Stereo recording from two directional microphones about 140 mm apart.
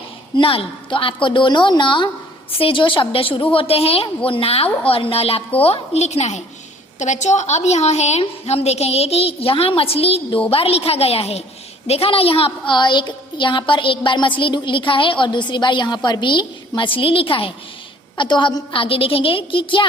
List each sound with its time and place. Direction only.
0.3 s a woman's voice: 40° left (ahead or behind)